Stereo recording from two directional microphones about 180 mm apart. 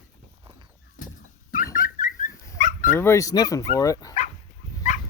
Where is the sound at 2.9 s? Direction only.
15° left (ahead or behind).